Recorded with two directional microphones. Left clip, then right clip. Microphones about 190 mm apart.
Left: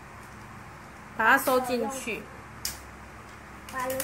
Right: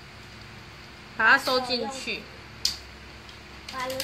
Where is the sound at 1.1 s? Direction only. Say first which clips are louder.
Right 1 dB; 15° left (ahead or behind).